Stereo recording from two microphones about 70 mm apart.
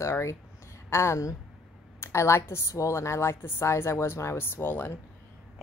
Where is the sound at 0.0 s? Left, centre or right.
Left.